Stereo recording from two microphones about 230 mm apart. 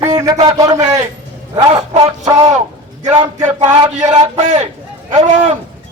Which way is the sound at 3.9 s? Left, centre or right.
Right.